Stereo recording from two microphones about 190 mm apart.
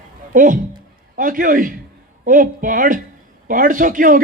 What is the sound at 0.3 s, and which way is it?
A man's voice, 45° right (ahead or behind).